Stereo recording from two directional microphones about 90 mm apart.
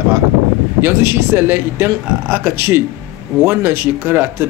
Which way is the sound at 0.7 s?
25° right (ahead or behind).